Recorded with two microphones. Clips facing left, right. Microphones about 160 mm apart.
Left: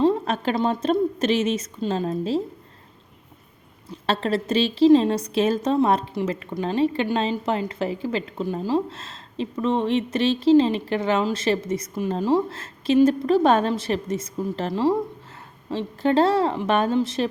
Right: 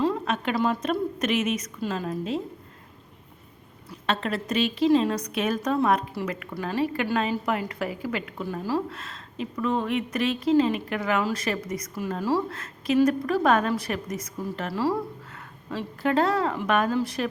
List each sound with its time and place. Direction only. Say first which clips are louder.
0.0 s a woman's voice: left 5 dB; 30° left (ahead or behind)
3.9 s a woman's voice: left 4 dB; 30° left (ahead or behind)